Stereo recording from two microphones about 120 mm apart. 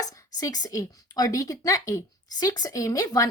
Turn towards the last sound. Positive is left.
turn(degrees=30)  # may be behind; listen again after turning